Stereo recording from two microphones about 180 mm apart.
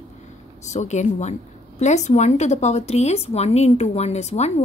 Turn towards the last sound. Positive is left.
turn(degrees=35)  # may be behind; listen again after turning